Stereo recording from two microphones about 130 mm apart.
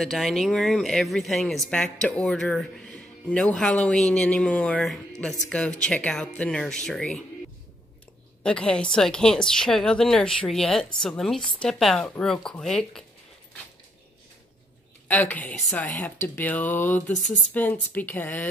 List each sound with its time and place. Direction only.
0.0 s speech: centre (ahead or behind)
8.4 s speech: 10° left (ahead or behind)
15.0 s speech: 15° left (ahead or behind)
17.1 s speech: 70° left (ahead or behind)
17.6 s speech: 15° left (ahead or behind)